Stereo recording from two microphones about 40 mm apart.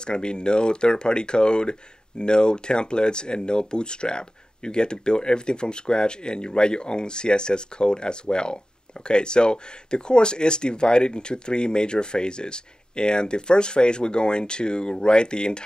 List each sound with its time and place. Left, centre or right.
0.0 s speech: left